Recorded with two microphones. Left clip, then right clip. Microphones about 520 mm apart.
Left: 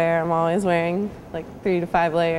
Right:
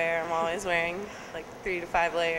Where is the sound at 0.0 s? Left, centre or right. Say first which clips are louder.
Left 7 dB; left.